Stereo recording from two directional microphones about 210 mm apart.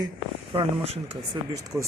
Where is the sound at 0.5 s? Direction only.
30° right (ahead or behind).